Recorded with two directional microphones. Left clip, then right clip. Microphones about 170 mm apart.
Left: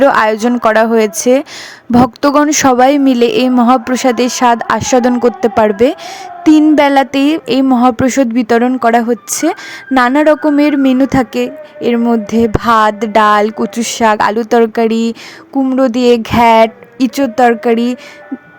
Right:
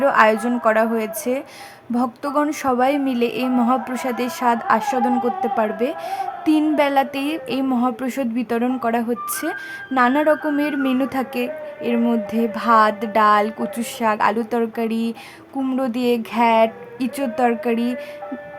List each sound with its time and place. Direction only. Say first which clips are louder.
0.0 s a woman's voice: left 6 dB; 50° left (ahead or behind)